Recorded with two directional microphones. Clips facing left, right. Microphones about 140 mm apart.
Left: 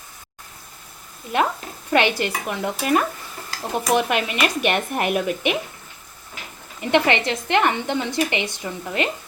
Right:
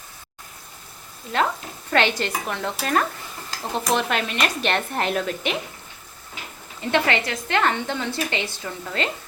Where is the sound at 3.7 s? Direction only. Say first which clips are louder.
Left 3 dB; 15° left (ahead or behind).